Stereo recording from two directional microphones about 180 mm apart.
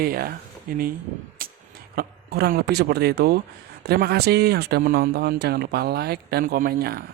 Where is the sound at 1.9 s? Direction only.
55° right (ahead or behind).